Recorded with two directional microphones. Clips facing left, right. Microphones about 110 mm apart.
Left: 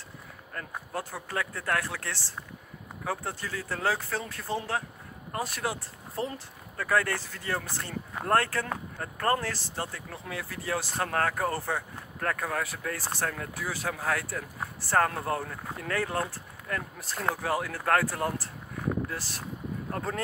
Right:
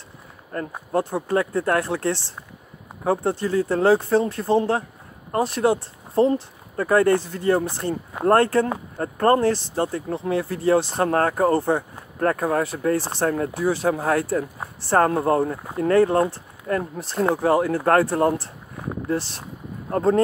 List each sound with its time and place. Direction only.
0.5 s speech: 30° right (ahead or behind)
8.9 s speech: 35° right (ahead or behind)
9.4 s speech: 20° right (ahead or behind)
9.8 s speech: 30° right (ahead or behind)